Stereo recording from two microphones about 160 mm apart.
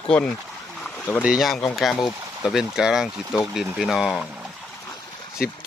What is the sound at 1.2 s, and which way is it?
Speech, centre (ahead or behind).